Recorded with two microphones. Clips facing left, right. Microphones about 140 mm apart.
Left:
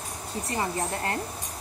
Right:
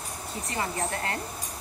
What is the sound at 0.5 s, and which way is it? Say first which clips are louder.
Speech: left 1 dB; 30° left (ahead or behind).